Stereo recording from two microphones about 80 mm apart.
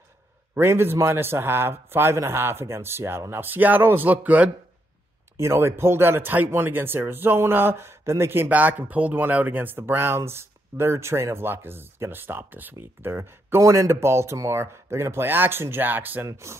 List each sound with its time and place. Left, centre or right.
0.6 s speech: right
5.4 s speech: right
16.3 s speech: right